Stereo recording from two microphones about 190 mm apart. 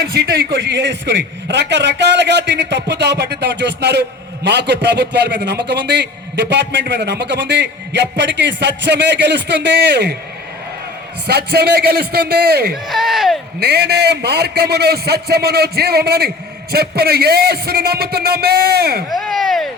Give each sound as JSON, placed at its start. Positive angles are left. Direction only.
{"t": 0.1, "sound": "a man's voice", "side_deg": -55}
{"t": 11.3, "sound": "a man's voice", "side_deg": -60}
{"t": 12.7, "sound": "speech", "side_deg": 0}
{"t": 13.6, "sound": "a man's voice", "side_deg": -60}
{"t": 19.1, "sound": "a sound", "side_deg": 0}